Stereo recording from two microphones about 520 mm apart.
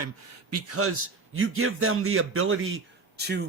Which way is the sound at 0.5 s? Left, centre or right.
Right.